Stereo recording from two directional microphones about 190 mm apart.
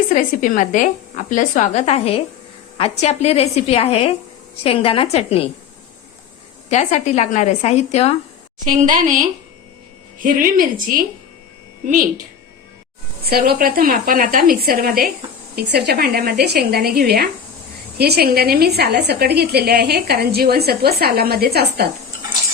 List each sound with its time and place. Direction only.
0.1 s a woman's voice: 45° left (ahead or behind)
6.7 s a woman's voice: 35° left (ahead or behind)
8.6 s a woman's voice: 45° right (ahead or behind)
13.2 s a woman's voice: 50° right (ahead or behind)